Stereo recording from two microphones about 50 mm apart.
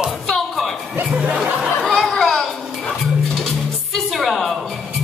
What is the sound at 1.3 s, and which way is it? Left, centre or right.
Music, centre.